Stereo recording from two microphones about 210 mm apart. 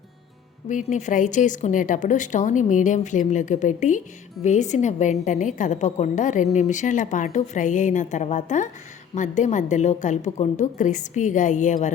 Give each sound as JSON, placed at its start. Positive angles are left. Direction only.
{"t": 0.7, "sound": "a woman's voice", "side_deg": 35}